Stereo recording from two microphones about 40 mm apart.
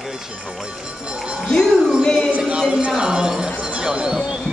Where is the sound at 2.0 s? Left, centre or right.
Left.